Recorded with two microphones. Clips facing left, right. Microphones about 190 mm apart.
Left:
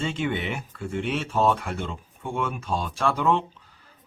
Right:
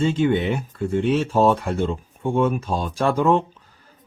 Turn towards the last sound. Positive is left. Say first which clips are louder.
# right 5 dB
turn(degrees=-45)  # may be behind; listen again after turning